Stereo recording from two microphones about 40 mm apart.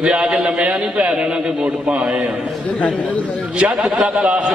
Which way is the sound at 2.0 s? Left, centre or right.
Centre.